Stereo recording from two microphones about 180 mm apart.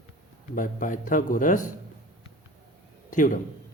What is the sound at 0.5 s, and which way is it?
Speech, 45° left (ahead or behind).